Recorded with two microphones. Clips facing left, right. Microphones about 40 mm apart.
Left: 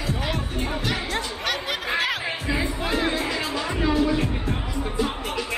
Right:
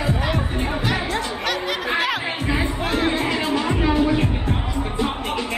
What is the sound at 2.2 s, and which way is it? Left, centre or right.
Music, right.